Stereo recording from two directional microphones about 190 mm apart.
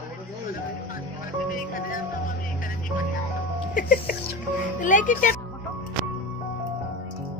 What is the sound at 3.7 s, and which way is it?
Speech, 45° left (ahead or behind).